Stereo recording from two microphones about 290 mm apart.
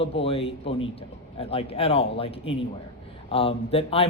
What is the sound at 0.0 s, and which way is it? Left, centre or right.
A man's voice, centre.